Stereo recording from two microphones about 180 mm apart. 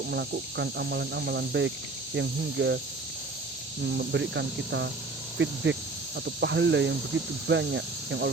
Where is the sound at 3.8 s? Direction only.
75° right (ahead or behind); by 5.8 s 90° right.